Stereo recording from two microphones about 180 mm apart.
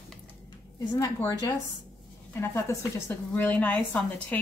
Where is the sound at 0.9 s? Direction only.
20° left (ahead or behind).